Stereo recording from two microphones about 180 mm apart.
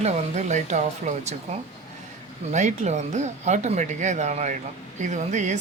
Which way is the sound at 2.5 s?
40° right (ahead or behind).